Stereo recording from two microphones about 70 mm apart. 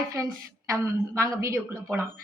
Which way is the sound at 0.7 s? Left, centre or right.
Right.